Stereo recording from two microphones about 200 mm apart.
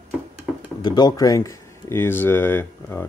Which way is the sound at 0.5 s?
Centre (ahead or behind).